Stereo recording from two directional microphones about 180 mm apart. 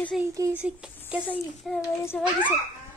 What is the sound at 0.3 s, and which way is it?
A child's voice, 15° right (ahead or behind).